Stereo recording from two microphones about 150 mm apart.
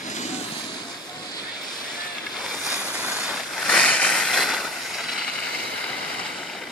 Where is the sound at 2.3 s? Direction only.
Centre (ahead or behind).